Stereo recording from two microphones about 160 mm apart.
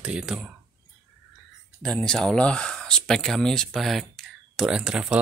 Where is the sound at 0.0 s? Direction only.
5° right (ahead or behind).